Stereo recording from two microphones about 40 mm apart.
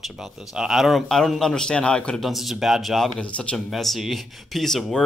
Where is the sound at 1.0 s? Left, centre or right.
Centre.